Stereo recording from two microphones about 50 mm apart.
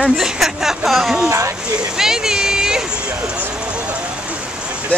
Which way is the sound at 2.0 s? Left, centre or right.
Centre.